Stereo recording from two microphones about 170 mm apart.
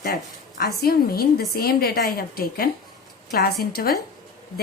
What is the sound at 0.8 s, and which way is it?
A woman's voice, 65° left (ahead or behind).